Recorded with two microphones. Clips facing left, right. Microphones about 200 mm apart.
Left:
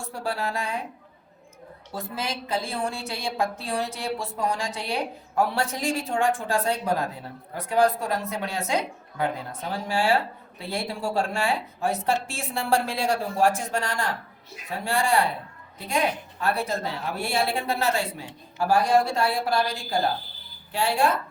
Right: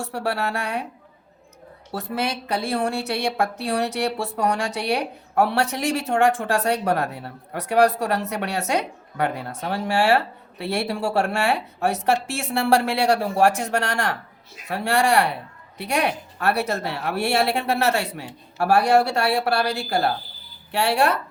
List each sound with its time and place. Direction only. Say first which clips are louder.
0.0 s a woman's voice: right 4 dB; 70° right (ahead or behind)
1.9 s a woman's voice: right 5 dB; 70° right (ahead or behind)